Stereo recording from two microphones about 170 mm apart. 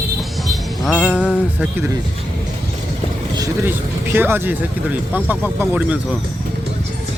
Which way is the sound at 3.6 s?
10° right (ahead or behind).